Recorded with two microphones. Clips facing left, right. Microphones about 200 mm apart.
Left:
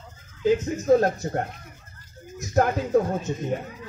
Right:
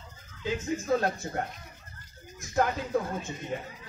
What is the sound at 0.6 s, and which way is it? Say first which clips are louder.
Speech: left 3 dB; 40° left (ahead or behind).